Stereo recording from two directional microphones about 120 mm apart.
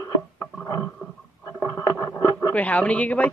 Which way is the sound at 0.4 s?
25° left (ahead or behind).